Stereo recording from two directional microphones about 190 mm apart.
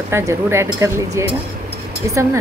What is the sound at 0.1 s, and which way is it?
Speech, 15° right (ahead or behind).